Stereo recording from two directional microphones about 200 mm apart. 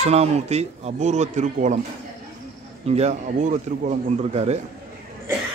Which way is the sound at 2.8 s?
35° right (ahead or behind).